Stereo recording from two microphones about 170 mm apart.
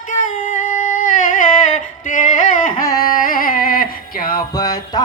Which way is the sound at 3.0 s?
55° left (ahead or behind).